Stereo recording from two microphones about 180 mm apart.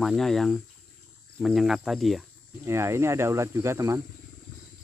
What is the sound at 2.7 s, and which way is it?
Speech, 15° right (ahead or behind).